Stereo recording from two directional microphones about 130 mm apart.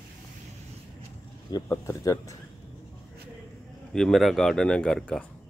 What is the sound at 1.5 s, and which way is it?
Speech, 20° left (ahead or behind).